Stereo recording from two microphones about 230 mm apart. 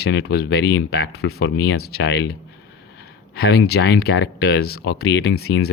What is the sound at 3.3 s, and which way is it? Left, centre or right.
Speech, left.